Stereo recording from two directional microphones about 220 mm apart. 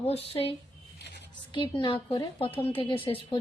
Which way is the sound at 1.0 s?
50° left (ahead or behind).